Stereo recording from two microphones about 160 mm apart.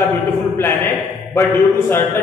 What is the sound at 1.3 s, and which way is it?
Speech, 15° left (ahead or behind).